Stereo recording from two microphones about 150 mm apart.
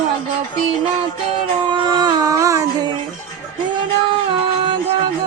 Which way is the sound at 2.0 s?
25° right (ahead or behind).